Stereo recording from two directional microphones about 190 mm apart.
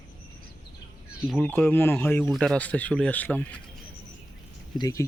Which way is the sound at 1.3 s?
5° left (ahead or behind).